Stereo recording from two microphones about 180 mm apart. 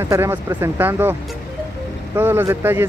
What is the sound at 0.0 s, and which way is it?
Speech, 15° right (ahead or behind).